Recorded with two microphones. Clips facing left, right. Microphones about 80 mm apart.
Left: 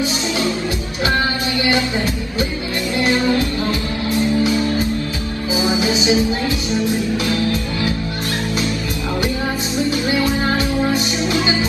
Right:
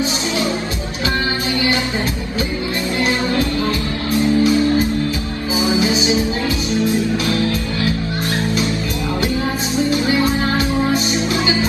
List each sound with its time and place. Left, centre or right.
3.0 s music: left
10.0 s music: right